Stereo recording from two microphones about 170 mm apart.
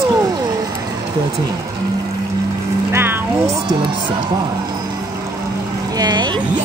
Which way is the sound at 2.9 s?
15° right (ahead or behind).